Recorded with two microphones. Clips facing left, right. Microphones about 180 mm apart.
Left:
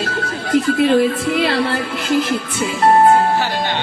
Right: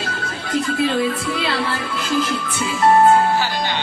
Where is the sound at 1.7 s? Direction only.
65° left (ahead or behind).